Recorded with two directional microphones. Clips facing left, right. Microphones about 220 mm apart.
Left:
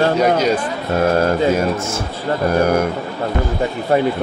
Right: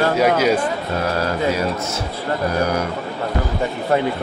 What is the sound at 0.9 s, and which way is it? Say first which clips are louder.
Speech: left 8 dB; 50° left (ahead or behind).